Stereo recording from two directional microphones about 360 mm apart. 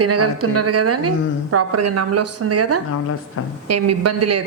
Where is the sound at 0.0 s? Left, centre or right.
Right.